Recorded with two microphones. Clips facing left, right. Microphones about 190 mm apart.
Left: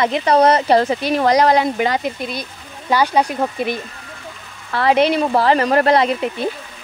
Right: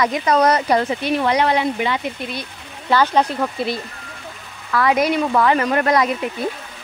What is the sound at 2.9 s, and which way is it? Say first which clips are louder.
Speech: even; 10° left (ahead or behind).